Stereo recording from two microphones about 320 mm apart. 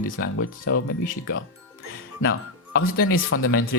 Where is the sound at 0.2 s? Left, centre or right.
Left.